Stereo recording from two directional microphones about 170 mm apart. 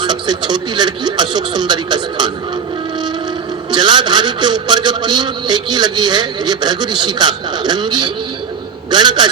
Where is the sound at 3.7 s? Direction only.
25° right (ahead or behind).